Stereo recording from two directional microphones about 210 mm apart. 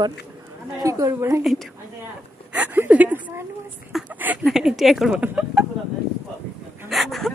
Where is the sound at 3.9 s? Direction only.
5° right (ahead or behind).